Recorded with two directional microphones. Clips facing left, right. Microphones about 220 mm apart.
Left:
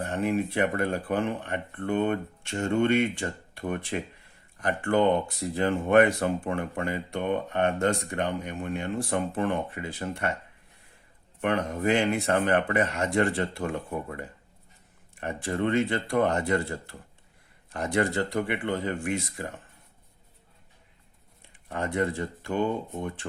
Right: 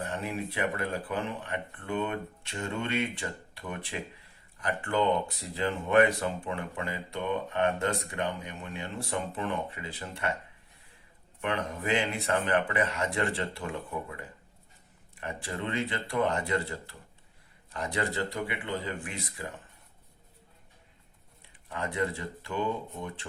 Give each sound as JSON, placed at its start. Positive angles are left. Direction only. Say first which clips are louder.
{"t": 0.0, "sound": "speech", "louder": "left 7 dB", "side_deg": 50}
{"t": 11.3, "sound": "speech", "louder": "left 5 dB", "side_deg": 45}
{"t": 15.1, "sound": "speech", "louder": "left 6 dB", "side_deg": 45}
{"t": 17.7, "sound": "speech", "louder": "left 6 dB", "side_deg": 45}
{"t": 21.7, "sound": "speech", "louder": "left 4 dB", "side_deg": 45}